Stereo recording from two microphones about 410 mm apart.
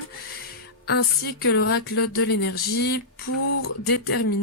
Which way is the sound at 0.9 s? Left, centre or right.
Left.